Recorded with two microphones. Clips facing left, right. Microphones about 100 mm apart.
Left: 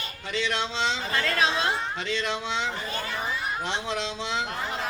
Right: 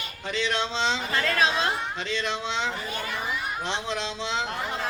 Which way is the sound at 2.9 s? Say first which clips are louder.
Even; 35° left (ahead or behind).